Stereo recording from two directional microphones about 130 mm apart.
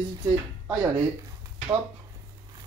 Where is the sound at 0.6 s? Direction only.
15° right (ahead or behind).